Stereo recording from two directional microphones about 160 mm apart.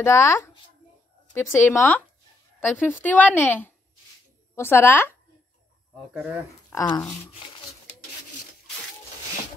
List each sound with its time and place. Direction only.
0.0 s speech: 15° left (ahead or behind)
6.7 s speech: 25° left (ahead or behind)